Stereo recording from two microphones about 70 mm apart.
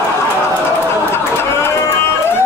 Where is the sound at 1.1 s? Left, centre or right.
Left.